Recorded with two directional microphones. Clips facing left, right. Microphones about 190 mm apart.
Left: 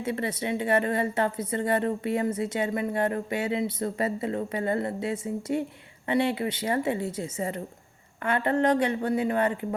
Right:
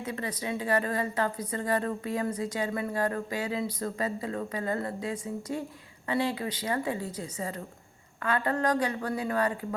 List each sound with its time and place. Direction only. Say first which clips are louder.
0.0 s a woman's voice: left 5 dB; 30° left (ahead or behind)